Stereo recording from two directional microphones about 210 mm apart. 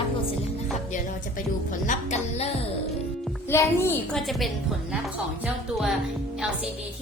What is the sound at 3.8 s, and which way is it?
Speech, 10° left (ahead or behind).